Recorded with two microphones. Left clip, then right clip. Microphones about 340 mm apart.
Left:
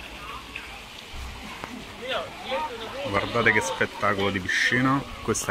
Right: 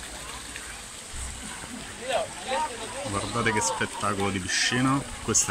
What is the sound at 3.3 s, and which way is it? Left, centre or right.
Speech, centre.